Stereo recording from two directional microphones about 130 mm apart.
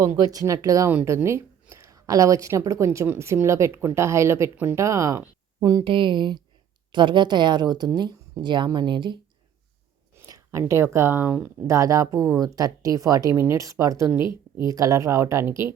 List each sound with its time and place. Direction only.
0.0 s a woman's voice: 30° right (ahead or behind)
5.8 s speech: 40° right (ahead or behind)
10.2 s speech: 25° right (ahead or behind)
11.6 s a woman's voice: 25° right (ahead or behind)